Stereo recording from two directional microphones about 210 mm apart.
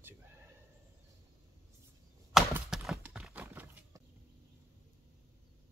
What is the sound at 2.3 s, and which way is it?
Horse, centre (ahead or behind).